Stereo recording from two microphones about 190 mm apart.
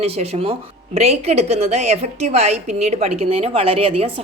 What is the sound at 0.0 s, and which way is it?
Speech, 30° right (ahead or behind).